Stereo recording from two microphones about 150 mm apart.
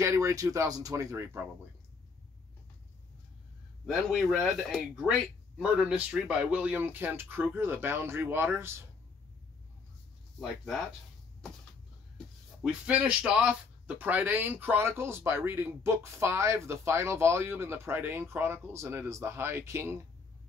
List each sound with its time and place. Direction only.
0.0 s speech: 20° right (ahead or behind)
3.8 s speech: centre (ahead or behind)
10.4 s speech: centre (ahead or behind)
12.8 s speech: 10° right (ahead or behind)